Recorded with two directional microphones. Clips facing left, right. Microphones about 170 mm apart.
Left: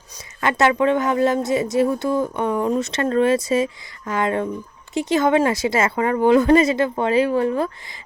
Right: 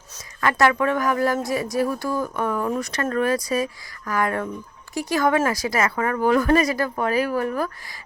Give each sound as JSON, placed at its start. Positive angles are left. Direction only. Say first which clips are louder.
{"t": 0.4, "sound": "speech", "louder": "left 2 dB", "side_deg": 20}